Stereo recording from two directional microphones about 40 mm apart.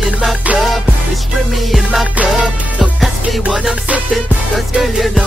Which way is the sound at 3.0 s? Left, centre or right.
Centre.